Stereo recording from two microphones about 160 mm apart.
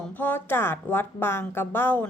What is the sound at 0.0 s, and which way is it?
A woman's voice, 10° left (ahead or behind).